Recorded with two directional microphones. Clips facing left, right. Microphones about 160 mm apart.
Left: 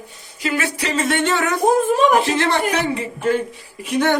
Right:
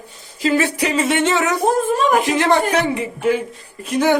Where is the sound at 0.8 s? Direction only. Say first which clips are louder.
Left 1 dB; 5° right (ahead or behind).